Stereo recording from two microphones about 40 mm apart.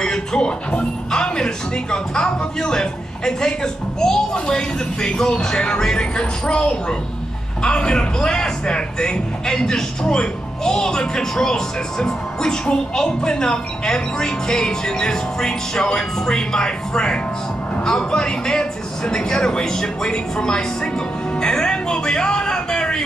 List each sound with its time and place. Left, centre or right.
0.0 s speech: centre
21.4 s music: left